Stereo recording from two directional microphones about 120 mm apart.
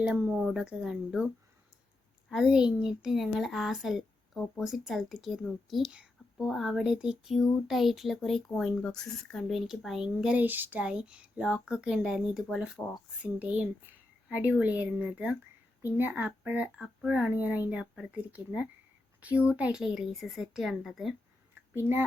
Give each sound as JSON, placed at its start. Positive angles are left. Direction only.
{"t": 0.1, "sound": "speech", "side_deg": -10}
{"t": 2.3, "sound": "speech", "side_deg": -5}
{"t": 21.8, "sound": "speech", "side_deg": -20}